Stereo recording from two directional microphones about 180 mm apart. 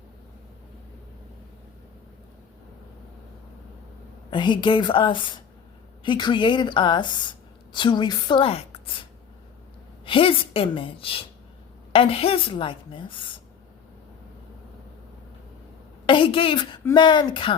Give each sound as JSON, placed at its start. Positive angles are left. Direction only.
{"t": 4.3, "sound": "a woman's voice", "side_deg": 25}
{"t": 10.1, "sound": "a woman's voice", "side_deg": 30}
{"t": 16.0, "sound": "a woman's voice", "side_deg": 30}